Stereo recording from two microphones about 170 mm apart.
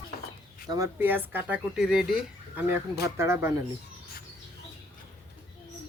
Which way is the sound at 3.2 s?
15° right (ahead or behind).